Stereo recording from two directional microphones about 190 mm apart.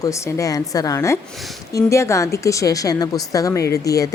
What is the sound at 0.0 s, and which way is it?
A woman's voice, 15° left (ahead or behind).